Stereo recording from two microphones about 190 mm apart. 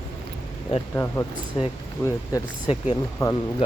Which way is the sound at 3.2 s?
15° left (ahead or behind).